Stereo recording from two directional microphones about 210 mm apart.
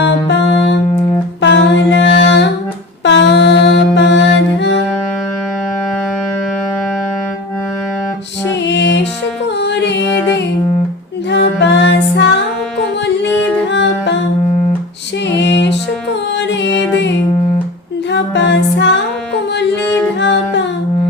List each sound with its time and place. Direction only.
0.3 s music: 55° left (ahead or behind)
1.4 s humming: 55° left (ahead or behind)
3.0 s mantra: 60° left (ahead or behind)
8.4 s music: 55° left (ahead or behind)
11.3 s music: 55° left (ahead or behind)
13.7 s music: 60° left (ahead or behind)
15.3 s music: 55° left (ahead or behind)
18.1 s music: 55° left (ahead or behind)
19.8 s music: 5° left (ahead or behind)
20.1 s music: 55° left (ahead or behind)